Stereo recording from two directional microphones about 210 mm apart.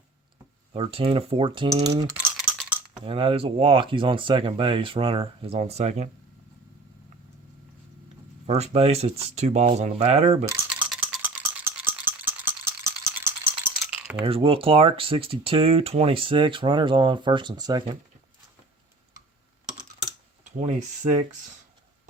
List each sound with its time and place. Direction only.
0.7 s speech: 25° right (ahead or behind)
2.1 s a sound: 5° right (ahead or behind)
3.0 s speech: 25° right (ahead or behind)
8.4 s speech: 30° right (ahead or behind)
10.4 s rattle: 10° right (ahead or behind)
13.8 s coin: 5° right (ahead or behind)
14.3 s speech: 25° right (ahead or behind)
20.4 s a sound: 35° right (ahead or behind)